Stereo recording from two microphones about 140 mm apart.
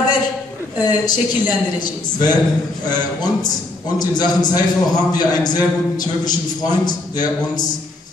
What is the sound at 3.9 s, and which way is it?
A man's voice, 30° left (ahead or behind).